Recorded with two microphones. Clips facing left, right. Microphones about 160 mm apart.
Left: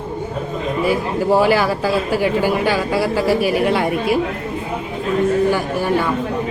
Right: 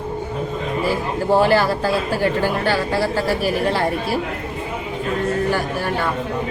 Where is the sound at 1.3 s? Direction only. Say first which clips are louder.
Even; 10° left (ahead or behind).